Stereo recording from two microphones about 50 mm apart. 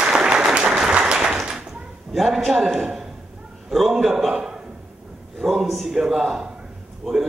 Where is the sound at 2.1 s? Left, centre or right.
Centre.